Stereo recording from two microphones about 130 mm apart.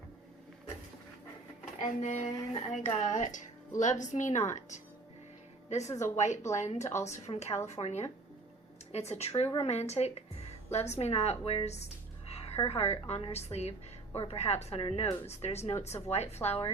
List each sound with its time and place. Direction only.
1.8 s a woman's voice: 60° left (ahead or behind)